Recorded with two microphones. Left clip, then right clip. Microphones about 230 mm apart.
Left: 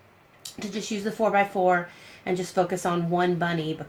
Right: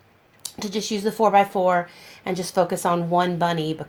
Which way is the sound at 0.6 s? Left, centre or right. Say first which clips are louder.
Right 6 dB; right.